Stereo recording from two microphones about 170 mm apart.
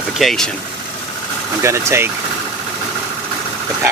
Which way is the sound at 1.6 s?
15° right (ahead or behind).